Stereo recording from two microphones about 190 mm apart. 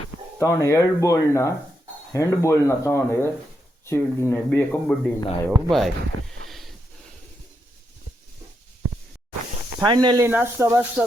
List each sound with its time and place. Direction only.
0.3 s speech: 15° left (ahead or behind)
5.7 s a sound: centre (ahead or behind)
9.8 s speech: 25° right (ahead or behind)
10.2 s speech: 10° right (ahead or behind)